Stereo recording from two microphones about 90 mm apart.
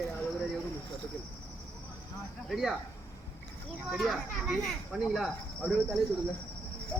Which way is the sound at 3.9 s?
Centre (ahead or behind).